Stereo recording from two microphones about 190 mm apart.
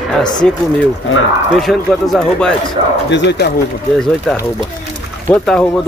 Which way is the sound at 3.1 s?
65° left (ahead or behind).